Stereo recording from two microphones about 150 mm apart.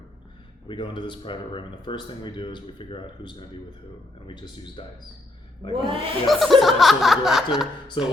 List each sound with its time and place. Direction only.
0.7 s speech: 30° left (ahead or behind)
4.8 s speech: 35° left (ahead or behind)
5.7 s speech: 35° right (ahead or behind)
6.2 s speech: centre (ahead or behind)